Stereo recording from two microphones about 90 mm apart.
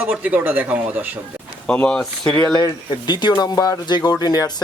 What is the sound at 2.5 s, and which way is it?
Speech, 55° left (ahead or behind).